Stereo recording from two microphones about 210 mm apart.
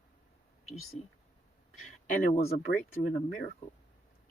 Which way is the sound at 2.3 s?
30° left (ahead or behind).